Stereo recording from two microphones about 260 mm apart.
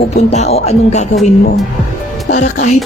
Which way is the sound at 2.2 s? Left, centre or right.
Left.